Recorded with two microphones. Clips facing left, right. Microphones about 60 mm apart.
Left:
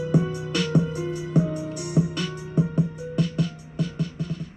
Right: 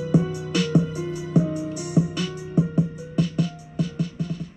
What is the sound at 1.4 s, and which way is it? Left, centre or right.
Music, centre.